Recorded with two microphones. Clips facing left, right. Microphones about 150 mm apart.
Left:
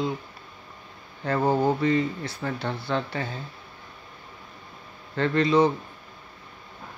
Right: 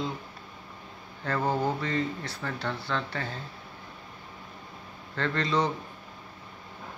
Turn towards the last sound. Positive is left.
turn(degrees=10)  # may be behind; listen again after turning